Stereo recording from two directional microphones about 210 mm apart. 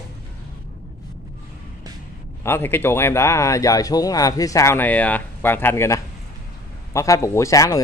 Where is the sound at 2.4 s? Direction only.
10° left (ahead or behind).